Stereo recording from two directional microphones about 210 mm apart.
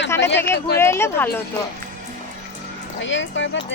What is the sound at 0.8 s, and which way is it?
Speech, 10° left (ahead or behind).